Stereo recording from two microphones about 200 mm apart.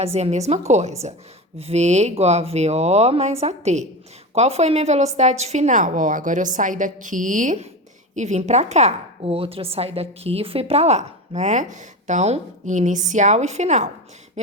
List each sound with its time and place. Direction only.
0.0 s a woman's voice: 30° right (ahead or behind)